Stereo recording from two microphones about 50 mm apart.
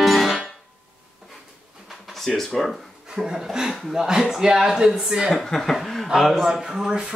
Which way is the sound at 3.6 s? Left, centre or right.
Centre.